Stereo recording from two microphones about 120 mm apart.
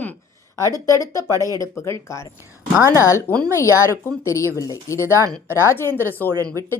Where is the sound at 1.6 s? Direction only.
25° left (ahead or behind).